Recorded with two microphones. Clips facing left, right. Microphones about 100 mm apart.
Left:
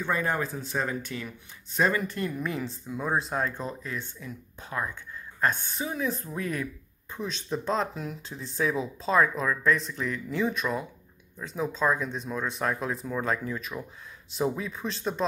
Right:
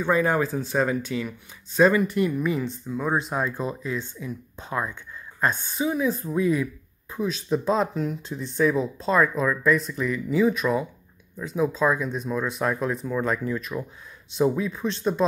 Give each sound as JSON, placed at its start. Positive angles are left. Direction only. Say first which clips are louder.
{"t": 0.6, "sound": "speech", "louder": "right 7 dB", "side_deg": -15}
{"t": 5.5, "sound": "speech", "louder": "right 6 dB", "side_deg": -10}